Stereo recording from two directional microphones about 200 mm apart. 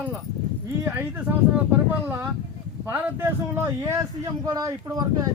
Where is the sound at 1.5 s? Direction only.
10° right (ahead or behind).